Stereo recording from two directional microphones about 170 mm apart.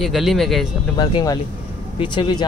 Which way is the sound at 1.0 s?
25° left (ahead or behind).